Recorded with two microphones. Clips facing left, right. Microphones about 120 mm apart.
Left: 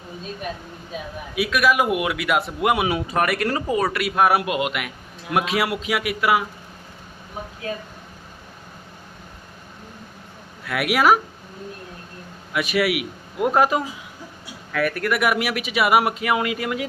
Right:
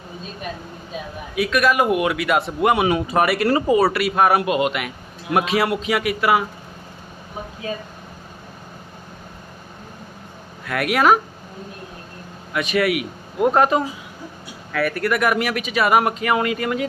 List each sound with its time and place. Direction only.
1.4 s a man's voice: 5° left (ahead or behind)
10.7 s a man's voice: 5° left (ahead or behind)
12.5 s a man's voice: 5° left (ahead or behind)